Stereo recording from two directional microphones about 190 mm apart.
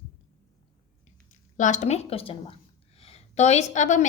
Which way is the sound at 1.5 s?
40° left (ahead or behind).